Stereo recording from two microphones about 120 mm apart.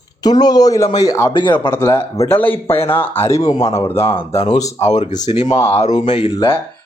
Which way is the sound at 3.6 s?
60° left (ahead or behind).